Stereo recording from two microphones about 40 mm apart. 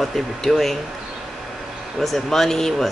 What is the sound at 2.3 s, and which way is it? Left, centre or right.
Speech, centre.